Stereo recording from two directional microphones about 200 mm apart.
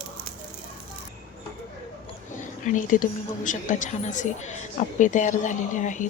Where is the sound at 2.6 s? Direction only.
40° left (ahead or behind).